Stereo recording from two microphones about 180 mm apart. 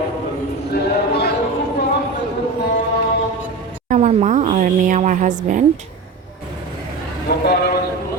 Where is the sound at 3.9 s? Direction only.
40° right (ahead or behind).